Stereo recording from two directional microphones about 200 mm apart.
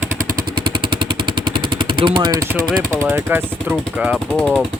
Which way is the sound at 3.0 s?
10° right (ahead or behind).